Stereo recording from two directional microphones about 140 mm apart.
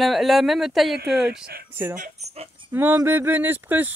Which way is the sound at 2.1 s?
50° right (ahead or behind).